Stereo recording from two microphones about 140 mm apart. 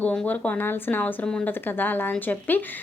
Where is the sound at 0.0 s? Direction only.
10° left (ahead or behind).